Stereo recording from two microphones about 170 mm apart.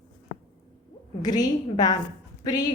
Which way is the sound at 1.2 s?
25° left (ahead or behind).